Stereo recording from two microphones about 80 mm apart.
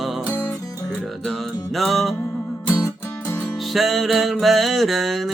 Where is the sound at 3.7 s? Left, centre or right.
Centre.